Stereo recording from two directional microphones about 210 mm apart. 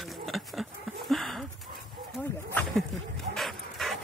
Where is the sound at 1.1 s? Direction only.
Centre (ahead or behind).